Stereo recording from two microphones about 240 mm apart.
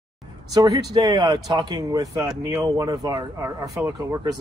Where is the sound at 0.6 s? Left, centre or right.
Centre.